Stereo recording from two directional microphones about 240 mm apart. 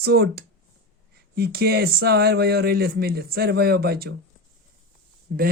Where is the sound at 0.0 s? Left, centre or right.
Right.